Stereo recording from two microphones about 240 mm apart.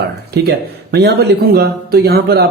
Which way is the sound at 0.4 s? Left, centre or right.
Right.